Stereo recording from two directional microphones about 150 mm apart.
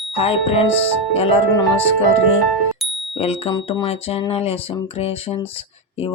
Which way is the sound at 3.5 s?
30° left (ahead or behind).